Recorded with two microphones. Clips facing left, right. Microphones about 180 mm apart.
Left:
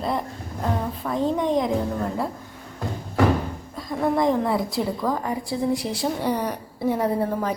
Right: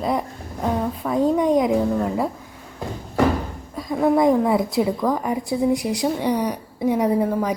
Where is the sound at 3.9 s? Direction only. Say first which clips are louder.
Right 4 dB; 5° right (ahead or behind).